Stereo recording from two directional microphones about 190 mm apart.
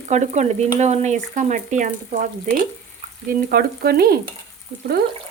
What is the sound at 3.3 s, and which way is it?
Stir, 55° right (ahead or behind).